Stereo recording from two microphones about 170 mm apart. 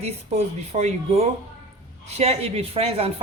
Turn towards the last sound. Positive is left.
turn(degrees=-35)  # may be behind; listen again after turning